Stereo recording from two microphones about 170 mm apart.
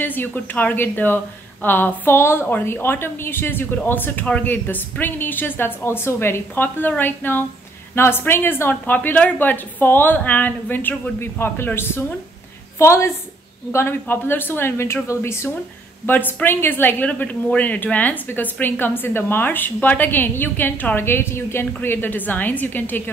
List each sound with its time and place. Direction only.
0.0 s a woman's voice: 10° left (ahead or behind)